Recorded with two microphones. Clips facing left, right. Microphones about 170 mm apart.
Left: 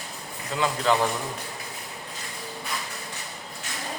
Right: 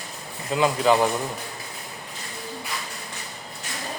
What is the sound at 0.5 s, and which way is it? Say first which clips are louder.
Speech: right 5 dB; 15° right (ahead or behind).